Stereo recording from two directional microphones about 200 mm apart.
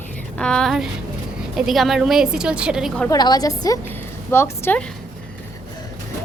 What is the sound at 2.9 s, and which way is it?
A woman's voice, 15° left (ahead or behind).